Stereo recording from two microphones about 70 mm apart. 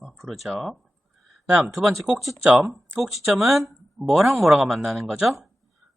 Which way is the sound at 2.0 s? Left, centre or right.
Centre.